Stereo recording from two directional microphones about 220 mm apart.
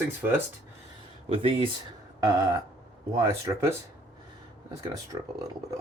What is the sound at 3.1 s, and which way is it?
Speech, 10° right (ahead or behind).